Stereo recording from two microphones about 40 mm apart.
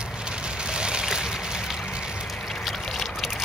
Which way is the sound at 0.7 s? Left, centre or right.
Right.